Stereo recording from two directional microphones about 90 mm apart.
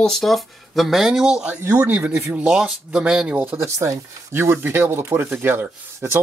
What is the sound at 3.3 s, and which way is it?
Speech, 25° right (ahead or behind).